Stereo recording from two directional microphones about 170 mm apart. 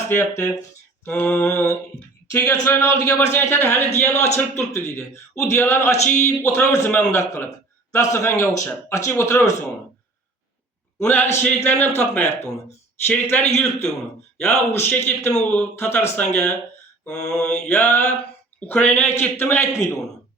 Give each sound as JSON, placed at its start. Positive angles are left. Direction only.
{"t": 0.1, "sound": "a man's voice", "side_deg": 15}
{"t": 11.0, "sound": "a man's voice", "side_deg": 10}